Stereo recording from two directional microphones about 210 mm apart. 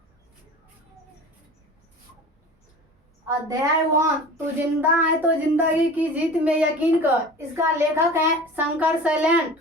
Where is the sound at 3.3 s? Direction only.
15° right (ahead or behind).